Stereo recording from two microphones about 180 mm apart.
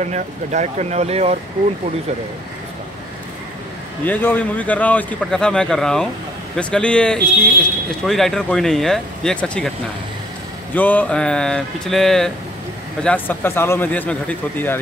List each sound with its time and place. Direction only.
0.0 s speech: 40° right (ahead or behind)
4.0 s speech: 10° left (ahead or behind)
10.7 s speech: 10° left (ahead or behind)